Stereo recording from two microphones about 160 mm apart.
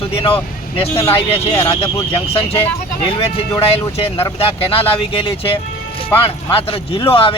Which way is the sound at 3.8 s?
35° left (ahead or behind).